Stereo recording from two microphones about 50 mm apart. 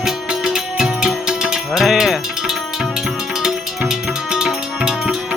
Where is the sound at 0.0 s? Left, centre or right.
Centre.